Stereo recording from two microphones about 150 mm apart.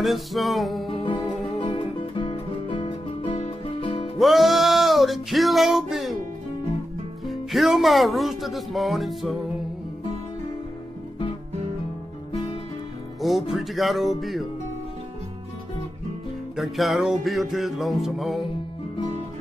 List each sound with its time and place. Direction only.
0.0 s speech: centre (ahead or behind)
1.6 s music: 35° left (ahead or behind)
4.2 s music: centre (ahead or behind)
7.2 s speech: centre (ahead or behind)
13.2 s speech: centre (ahead or behind)
16.5 s speech: centre (ahead or behind)